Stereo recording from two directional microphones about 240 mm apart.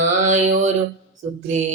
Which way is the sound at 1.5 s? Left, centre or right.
Right.